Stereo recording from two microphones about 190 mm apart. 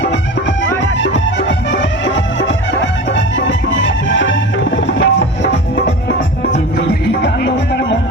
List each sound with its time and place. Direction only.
0.8 s music: 75° left (ahead or behind)